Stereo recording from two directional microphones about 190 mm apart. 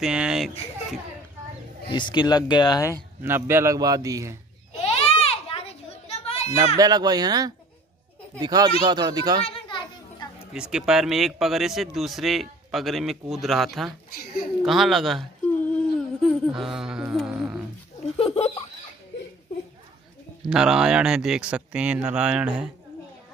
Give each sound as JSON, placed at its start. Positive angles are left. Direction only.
{"t": 0.0, "sound": "speech", "side_deg": -5}
{"t": 1.9, "sound": "speech", "side_deg": 25}
{"t": 3.2, "sound": "a man's voice", "side_deg": -10}
{"t": 4.8, "sound": "children playing", "side_deg": 30}
{"t": 6.8, "sound": "speech", "side_deg": -20}
{"t": 9.4, "sound": "children playing", "side_deg": 25}
{"t": 10.5, "sound": "speech", "side_deg": -5}
{"t": 14.6, "sound": "whimper", "side_deg": 0}
{"t": 18.0, "sound": "a sound", "side_deg": 30}
{"t": 20.4, "sound": "speech", "side_deg": -5}